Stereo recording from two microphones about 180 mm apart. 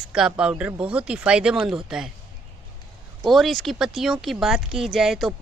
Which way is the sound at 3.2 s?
Centre (ahead or behind).